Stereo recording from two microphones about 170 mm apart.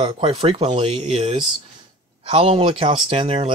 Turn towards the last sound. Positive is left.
turn(degrees=-35)  # may be behind; listen again after turning